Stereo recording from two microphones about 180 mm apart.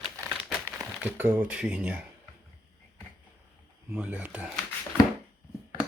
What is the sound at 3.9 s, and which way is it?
Speech, 10° right (ahead or behind).